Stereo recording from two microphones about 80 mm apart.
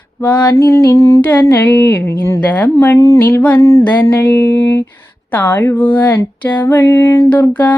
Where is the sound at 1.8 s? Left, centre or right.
Left.